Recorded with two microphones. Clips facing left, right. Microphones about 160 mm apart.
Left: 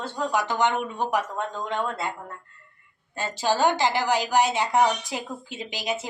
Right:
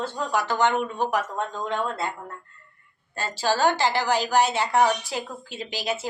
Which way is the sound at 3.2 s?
15° left (ahead or behind).